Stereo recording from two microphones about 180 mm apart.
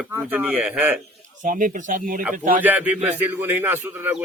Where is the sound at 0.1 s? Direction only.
10° right (ahead or behind).